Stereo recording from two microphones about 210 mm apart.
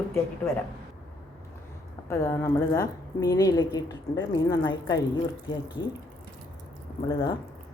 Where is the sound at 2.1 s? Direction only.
15° left (ahead or behind).